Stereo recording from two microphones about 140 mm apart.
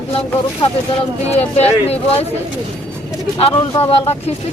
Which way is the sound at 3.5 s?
35° left (ahead or behind).